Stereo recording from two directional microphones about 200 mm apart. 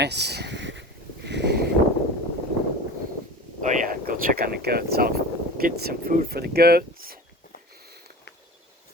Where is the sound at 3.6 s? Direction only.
40° right (ahead or behind).